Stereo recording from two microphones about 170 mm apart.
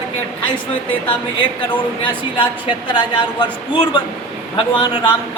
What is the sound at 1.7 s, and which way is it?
A woman's voice, 30° left (ahead or behind).